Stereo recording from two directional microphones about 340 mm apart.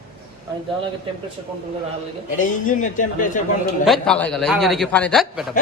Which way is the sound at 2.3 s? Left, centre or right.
Left.